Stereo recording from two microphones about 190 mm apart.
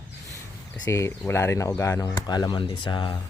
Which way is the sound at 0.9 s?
15° left (ahead or behind).